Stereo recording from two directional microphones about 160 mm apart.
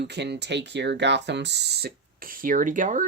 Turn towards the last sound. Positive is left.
turn(degrees=-55)  # may be behind; listen again after turning